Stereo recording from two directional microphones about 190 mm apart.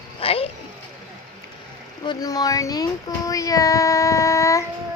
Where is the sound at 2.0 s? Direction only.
20° left (ahead or behind).